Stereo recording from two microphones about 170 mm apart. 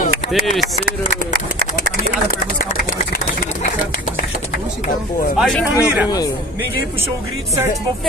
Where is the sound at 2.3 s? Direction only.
60° left (ahead or behind).